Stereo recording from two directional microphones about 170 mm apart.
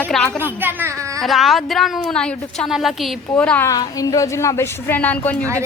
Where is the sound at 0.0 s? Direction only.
10° left (ahead or behind).